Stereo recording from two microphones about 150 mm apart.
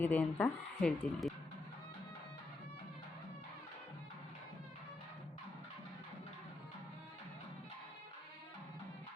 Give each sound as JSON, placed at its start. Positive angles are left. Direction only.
{"t": 0.0, "sound": "speech", "side_deg": 10}